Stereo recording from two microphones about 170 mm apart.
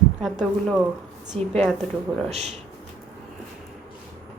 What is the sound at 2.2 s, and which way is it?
Speech, 40° right (ahead or behind).